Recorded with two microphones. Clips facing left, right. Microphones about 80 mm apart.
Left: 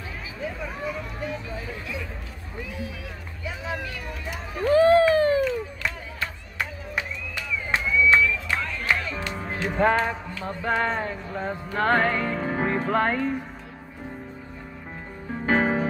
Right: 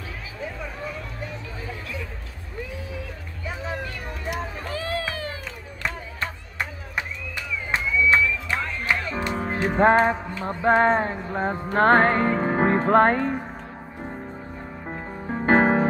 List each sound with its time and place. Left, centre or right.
4.6 s run: left
7.7 s music: right
10.2 s speech: right
14.9 s music: right